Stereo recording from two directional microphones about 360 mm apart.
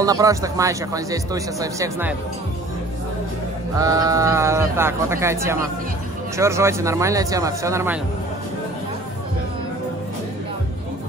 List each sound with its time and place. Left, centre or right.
0.0 s speech: centre
3.7 s speech: centre